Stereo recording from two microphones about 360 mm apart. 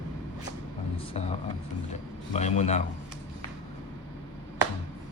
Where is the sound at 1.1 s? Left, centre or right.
Centre.